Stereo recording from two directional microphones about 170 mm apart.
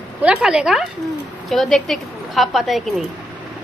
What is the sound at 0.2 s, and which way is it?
A woman's voice, 5° right (ahead or behind).